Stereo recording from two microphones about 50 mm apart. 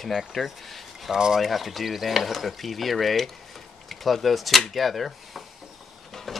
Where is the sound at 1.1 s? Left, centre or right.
Centre.